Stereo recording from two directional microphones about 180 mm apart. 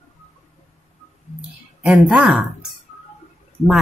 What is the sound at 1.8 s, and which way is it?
Speech, 5° right (ahead or behind).